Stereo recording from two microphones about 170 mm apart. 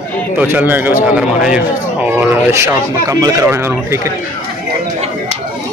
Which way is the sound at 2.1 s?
15° right (ahead or behind).